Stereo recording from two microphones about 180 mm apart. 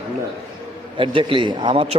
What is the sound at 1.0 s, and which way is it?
Speech, 30° right (ahead or behind).